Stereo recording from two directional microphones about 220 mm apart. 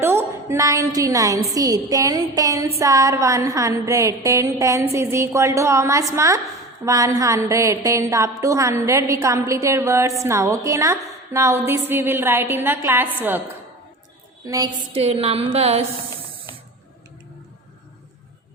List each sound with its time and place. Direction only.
0.0 s a woman's voice: 10° right (ahead or behind)
14.4 s a woman's voice: 15° right (ahead or behind)